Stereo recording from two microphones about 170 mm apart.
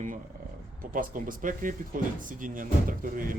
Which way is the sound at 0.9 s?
50° right (ahead or behind).